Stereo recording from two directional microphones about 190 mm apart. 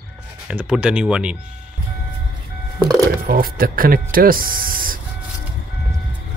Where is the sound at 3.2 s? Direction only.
50° right (ahead or behind).